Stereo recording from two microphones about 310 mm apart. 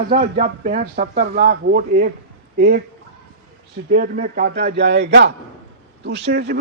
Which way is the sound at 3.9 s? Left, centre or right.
Right.